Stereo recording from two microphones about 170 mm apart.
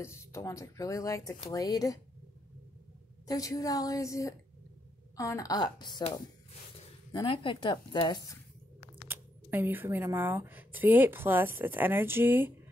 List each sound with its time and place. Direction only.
0.0 s speech: 15° left (ahead or behind)
3.3 s speech: 20° left (ahead or behind)
9.1 s speech: 10° right (ahead or behind)